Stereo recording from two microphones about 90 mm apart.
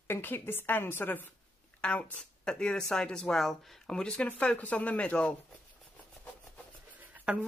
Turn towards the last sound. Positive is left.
turn(degrees=-10)  # may be behind; listen again after turning